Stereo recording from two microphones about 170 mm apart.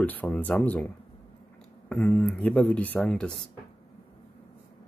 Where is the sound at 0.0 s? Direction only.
10° left (ahead or behind).